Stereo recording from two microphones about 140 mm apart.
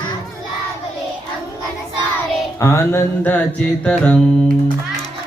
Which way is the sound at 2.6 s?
20° left (ahead or behind).